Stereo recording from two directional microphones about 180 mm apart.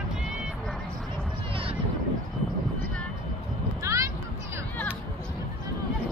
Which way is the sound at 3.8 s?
15° right (ahead or behind).